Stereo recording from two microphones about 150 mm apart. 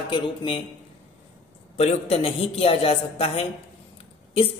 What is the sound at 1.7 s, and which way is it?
A man's voice, 45° left (ahead or behind).